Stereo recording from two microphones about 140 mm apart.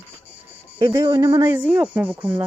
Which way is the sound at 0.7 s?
35° right (ahead or behind).